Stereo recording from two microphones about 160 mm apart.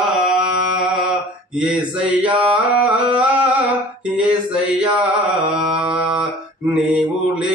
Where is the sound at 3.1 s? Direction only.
10° right (ahead or behind).